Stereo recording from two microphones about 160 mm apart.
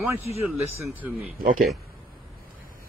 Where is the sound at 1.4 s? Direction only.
65° right (ahead or behind).